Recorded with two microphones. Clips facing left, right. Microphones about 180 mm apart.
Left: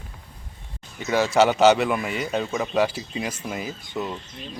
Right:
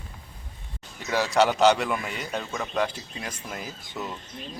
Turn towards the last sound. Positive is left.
turn(degrees=0)  # may be behind; listen again after turning